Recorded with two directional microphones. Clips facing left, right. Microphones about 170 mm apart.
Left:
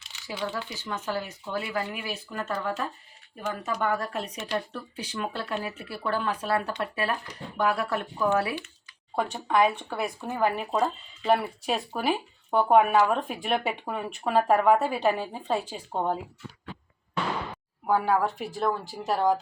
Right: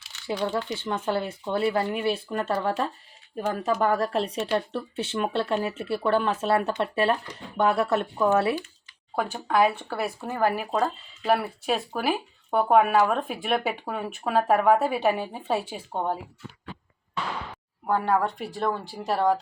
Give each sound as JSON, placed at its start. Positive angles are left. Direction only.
{"t": 0.8, "sound": "speech", "side_deg": -30}
{"t": 9.1, "sound": "speech", "side_deg": -5}
{"t": 17.5, "sound": "speech", "side_deg": 5}